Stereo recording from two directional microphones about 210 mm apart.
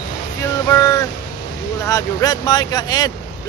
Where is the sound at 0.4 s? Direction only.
15° left (ahead or behind).